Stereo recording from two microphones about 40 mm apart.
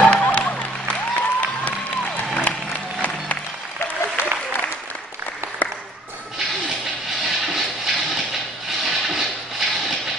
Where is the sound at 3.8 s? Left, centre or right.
Left.